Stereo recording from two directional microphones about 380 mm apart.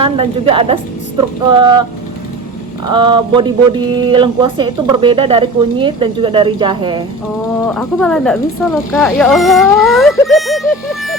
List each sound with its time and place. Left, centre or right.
0.0 s speech: centre
2.8 s speech: centre
7.7 s speech: centre